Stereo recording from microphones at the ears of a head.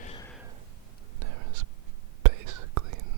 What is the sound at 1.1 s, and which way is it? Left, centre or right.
Whispering, right.